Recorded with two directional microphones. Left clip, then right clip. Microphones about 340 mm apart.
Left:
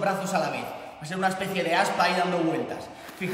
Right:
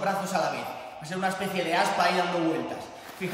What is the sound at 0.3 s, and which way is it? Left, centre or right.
A man's voice, centre.